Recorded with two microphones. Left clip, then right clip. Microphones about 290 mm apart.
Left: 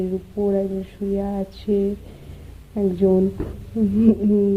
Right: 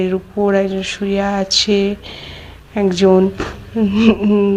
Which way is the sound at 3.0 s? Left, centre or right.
Right.